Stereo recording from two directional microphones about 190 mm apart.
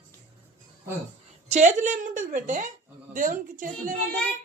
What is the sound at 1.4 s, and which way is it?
A woman's voice, 40° right (ahead or behind).